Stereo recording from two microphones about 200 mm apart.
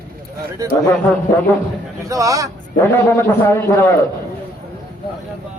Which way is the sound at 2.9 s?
10° left (ahead or behind).